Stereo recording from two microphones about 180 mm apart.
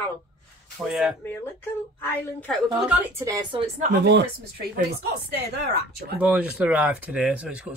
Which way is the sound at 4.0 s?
70° right (ahead or behind).